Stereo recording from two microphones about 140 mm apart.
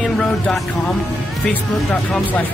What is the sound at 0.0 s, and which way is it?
Music, centre (ahead or behind).